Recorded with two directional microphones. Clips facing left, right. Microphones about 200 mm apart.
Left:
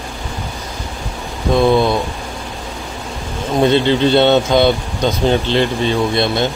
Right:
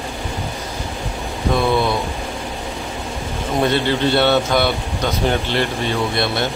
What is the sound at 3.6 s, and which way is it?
Speech, 20° left (ahead or behind).